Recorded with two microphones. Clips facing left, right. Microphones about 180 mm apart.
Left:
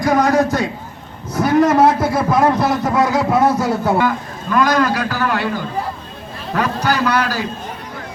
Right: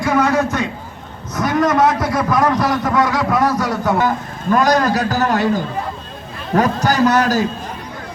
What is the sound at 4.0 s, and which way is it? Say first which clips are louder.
A man's voice: even; 45° right (ahead or behind).